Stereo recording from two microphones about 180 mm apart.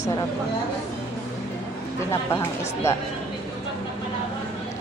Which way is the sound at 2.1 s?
15° left (ahead or behind).